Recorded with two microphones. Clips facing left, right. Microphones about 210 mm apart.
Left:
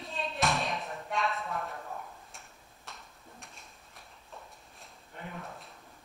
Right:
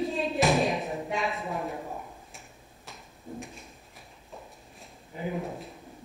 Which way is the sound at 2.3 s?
Centre (ahead or behind).